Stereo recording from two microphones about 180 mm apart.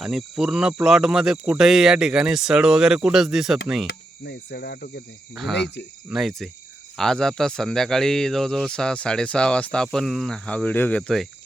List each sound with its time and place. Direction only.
0.0 s speech: centre (ahead or behind)
3.8 s cricket: 65° left (ahead or behind)
5.3 s speech: centre (ahead or behind)